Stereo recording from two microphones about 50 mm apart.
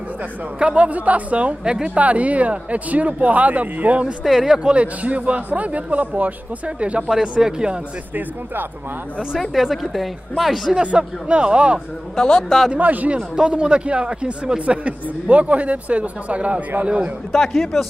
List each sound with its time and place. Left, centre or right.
0.6 s a man's voice: right
1.6 s speech: centre
2.0 s a man's voice: right
4.2 s a woman's voice: centre
4.6 s a man's voice: right
7.1 s speech: centre
9.4 s a woman's voice: centre
10.8 s a man's voice: right
12.2 s a man's voice: centre
12.7 s a man's voice: right
13.4 s a man's voice: right
17.3 s a woman's voice: centre